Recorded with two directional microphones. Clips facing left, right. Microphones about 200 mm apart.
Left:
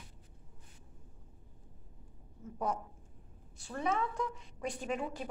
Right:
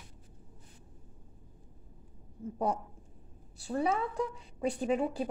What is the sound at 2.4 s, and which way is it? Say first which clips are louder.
A woman's voice: right 4 dB; 30° right (ahead or behind).